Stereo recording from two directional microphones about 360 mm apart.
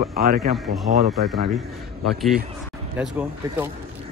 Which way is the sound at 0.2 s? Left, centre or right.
Right.